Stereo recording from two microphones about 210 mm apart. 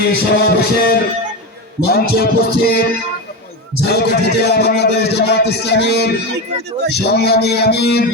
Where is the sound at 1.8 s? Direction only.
50° left (ahead or behind).